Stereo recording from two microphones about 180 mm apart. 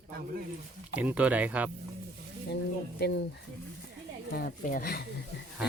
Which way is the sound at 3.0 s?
65° left (ahead or behind).